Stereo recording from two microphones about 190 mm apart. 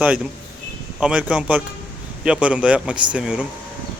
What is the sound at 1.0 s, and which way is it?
Speech, 5° right (ahead or behind).